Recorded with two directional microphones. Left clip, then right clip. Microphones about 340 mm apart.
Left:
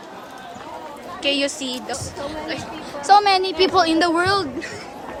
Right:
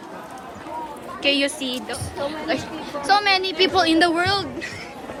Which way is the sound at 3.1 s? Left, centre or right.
Centre.